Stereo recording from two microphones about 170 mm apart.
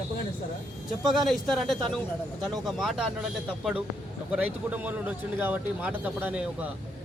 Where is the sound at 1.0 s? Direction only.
Centre (ahead or behind).